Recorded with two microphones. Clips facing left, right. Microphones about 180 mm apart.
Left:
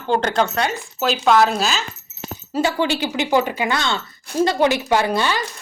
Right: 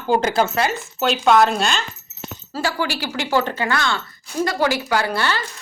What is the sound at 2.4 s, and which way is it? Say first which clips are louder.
Speech: left 4 dB; 20° left (ahead or behind).